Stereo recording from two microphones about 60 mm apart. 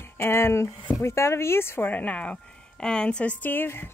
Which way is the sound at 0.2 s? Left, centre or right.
Left.